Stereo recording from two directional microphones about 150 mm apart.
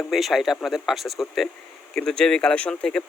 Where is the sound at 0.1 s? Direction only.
Centre (ahead or behind).